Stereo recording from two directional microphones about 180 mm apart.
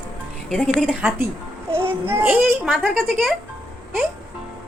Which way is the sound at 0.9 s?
5° right (ahead or behind).